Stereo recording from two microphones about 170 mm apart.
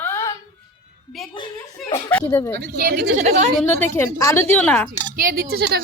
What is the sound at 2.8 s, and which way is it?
Speech, 65° right (ahead or behind).